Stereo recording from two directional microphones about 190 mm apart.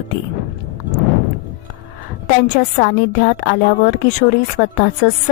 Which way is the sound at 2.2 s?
50° left (ahead or behind).